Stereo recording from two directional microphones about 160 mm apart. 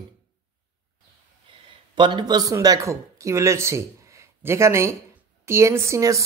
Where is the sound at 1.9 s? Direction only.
30° right (ahead or behind).